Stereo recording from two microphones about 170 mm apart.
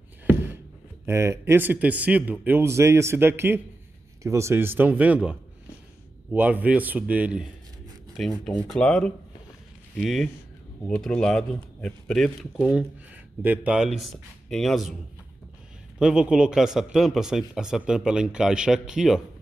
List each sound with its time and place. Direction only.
1.0 s speech: 15° right (ahead or behind); by 15.0 s centre (ahead or behind)
16.0 s speech: 5° right (ahead or behind)